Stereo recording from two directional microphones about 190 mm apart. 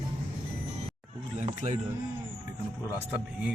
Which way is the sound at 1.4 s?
35° right (ahead or behind).